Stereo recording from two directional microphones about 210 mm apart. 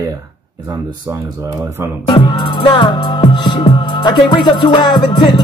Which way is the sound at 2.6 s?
20° left (ahead or behind).